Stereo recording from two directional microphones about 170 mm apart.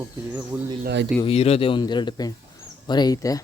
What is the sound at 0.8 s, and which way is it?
Speech, 90° right.